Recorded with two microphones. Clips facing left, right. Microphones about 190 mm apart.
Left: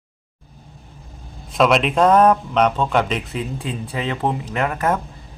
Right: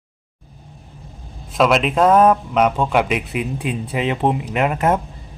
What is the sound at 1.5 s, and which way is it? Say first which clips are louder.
Speech: even; centre (ahead or behind).